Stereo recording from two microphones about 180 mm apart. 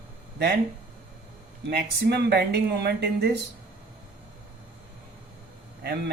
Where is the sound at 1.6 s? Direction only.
65° right (ahead or behind).